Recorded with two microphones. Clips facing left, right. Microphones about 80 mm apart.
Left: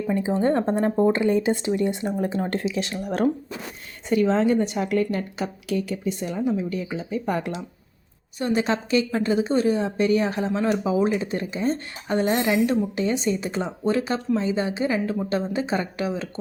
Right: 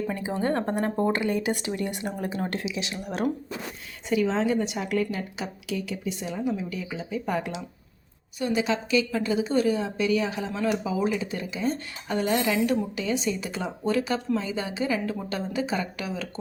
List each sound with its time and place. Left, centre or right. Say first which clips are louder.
0.1 s a woman's voice: left 10 dB; left